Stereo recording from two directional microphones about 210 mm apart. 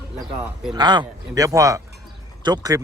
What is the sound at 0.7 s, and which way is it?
Speech, 20° right (ahead or behind).